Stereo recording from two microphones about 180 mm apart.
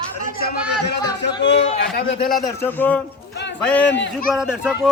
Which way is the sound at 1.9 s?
60° left (ahead or behind).